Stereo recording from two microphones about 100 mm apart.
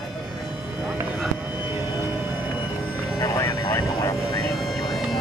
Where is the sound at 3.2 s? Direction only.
30° left (ahead or behind).